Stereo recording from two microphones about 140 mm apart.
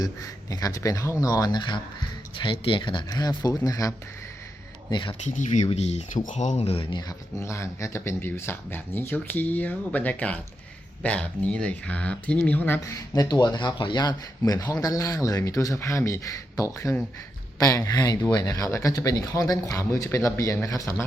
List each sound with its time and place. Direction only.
0.0 s speech: 25° left (ahead or behind)
5.2 s speech: 60° left (ahead or behind); by 7.0 s 40° left (ahead or behind)
7.1 s speech: 20° left (ahead or behind)
12.8 s speech: 25° left (ahead or behind)